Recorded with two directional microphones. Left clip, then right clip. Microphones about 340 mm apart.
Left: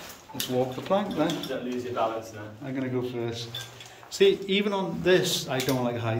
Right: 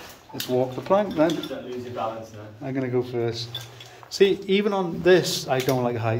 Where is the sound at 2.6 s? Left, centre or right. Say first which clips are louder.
Right 5 dB; centre.